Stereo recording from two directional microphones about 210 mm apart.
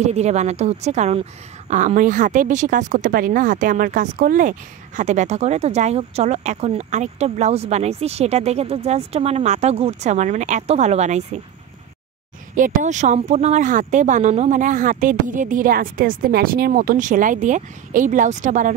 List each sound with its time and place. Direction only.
0.0 s speech: 30° right (ahead or behind)
12.5 s speech: 40° right (ahead or behind)